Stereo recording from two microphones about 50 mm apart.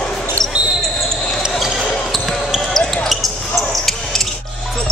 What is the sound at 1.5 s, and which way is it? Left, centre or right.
Basketball bounce, centre.